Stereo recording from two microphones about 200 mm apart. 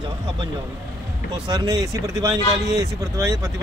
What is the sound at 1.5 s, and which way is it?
Speech, 20° right (ahead or behind).